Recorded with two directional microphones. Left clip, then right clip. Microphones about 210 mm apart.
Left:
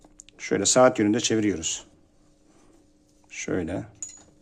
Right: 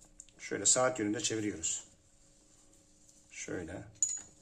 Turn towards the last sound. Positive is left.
turn(degrees=50)  # may be behind; listen again after turning